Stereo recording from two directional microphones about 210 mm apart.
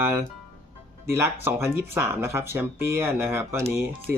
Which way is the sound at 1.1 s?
10° right (ahead or behind).